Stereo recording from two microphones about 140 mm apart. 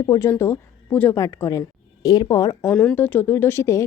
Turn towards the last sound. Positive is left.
turn(degrees=20)  # may be behind; listen again after turning